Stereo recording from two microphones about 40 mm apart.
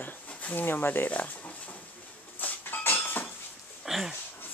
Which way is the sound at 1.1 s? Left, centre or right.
Left.